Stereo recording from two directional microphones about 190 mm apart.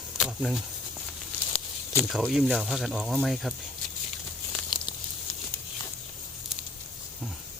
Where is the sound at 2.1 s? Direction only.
Centre (ahead or behind).